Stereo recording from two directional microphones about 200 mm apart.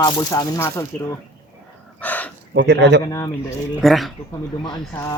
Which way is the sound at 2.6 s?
60° right (ahead or behind).